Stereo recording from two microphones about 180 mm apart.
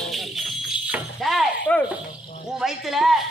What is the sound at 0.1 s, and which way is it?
Music, centre (ahead or behind).